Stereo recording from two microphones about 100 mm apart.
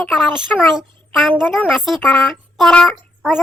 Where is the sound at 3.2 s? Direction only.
5° right (ahead or behind).